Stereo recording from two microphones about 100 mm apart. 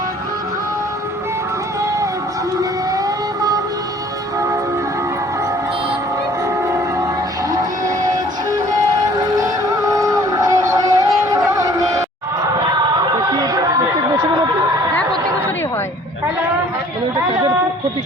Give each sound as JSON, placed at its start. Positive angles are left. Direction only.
{"t": 9.3, "sound": "music", "side_deg": -40}
{"t": 13.0, "sound": "chatter", "side_deg": -45}